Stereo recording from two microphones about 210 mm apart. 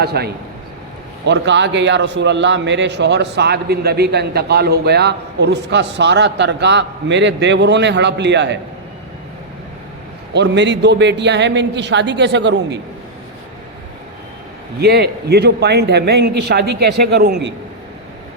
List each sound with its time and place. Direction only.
0.0 s a man's voice: 50° right (ahead or behind)
1.3 s a man's voice: 55° right (ahead or behind)
10.3 s a man's voice: 55° right (ahead or behind)
14.8 s a man's voice: 50° right (ahead or behind)